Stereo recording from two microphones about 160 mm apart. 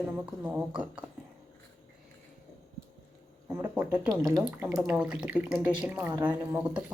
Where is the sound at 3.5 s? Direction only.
15° right (ahead or behind).